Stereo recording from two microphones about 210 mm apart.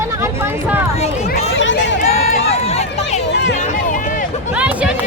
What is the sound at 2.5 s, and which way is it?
Run, 30° left (ahead or behind).